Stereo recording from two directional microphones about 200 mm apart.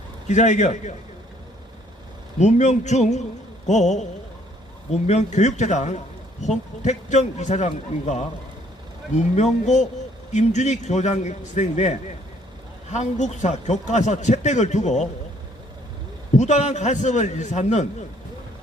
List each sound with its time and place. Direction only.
0.3 s a man's voice: 35° left (ahead or behind)
2.4 s a man's voice: 35° left (ahead or behind)
16.3 s a man's voice: 35° left (ahead or behind)